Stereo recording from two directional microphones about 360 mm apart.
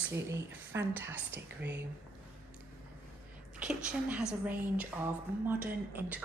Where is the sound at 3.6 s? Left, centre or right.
Centre.